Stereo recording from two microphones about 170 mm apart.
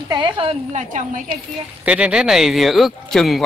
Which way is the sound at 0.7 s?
45° right (ahead or behind).